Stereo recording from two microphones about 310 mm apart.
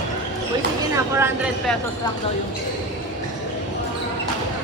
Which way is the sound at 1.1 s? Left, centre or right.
Centre.